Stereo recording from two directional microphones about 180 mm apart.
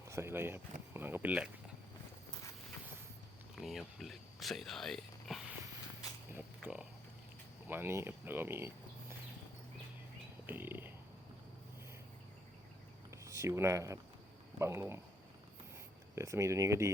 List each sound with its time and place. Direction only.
0.0 s speech: 15° right (ahead or behind)
3.5 s speech: centre (ahead or behind)
10.4 s a sound: 10° right (ahead or behind)
13.1 s speech: 15° right (ahead or behind)
16.1 s speech: 15° right (ahead or behind)